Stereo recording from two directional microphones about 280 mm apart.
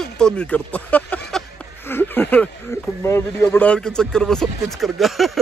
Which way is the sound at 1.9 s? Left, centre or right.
Centre.